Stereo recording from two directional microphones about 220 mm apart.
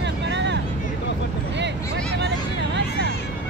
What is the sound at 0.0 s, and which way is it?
Vehicle, 55° right (ahead or behind).